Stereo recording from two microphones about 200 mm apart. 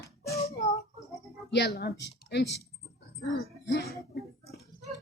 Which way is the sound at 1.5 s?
55° left (ahead or behind).